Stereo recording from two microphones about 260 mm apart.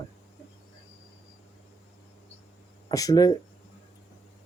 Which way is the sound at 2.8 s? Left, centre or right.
Centre.